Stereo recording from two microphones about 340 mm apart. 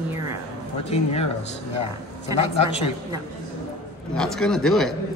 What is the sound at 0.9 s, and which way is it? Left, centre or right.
Speech, centre.